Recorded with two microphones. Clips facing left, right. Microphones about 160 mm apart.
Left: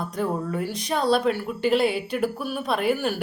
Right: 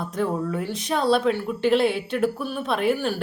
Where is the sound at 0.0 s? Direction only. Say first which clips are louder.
Right 1 dB; centre (ahead or behind).